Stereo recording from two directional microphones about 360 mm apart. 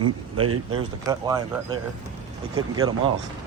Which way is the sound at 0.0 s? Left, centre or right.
Right.